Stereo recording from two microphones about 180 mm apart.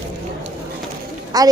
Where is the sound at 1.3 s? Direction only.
20° right (ahead or behind).